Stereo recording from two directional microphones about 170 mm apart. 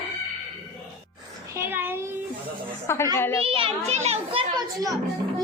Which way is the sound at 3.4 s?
35° right (ahead or behind).